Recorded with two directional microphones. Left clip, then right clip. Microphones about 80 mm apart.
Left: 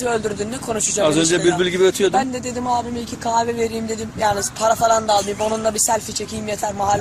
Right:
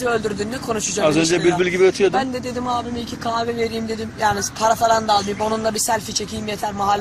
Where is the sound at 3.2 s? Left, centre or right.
Left.